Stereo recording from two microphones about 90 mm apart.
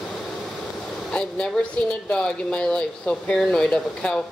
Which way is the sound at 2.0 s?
10° left (ahead or behind).